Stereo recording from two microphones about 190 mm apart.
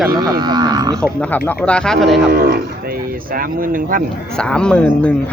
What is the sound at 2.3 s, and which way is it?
Cattle, 55° right (ahead or behind).